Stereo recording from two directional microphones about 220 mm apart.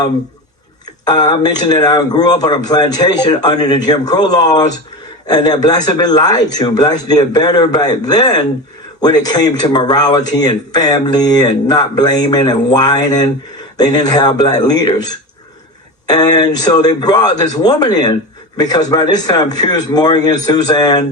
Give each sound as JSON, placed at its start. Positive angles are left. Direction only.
{"t": 1.0, "sound": "speech", "side_deg": 20}
{"t": 16.0, "sound": "speech", "side_deg": 15}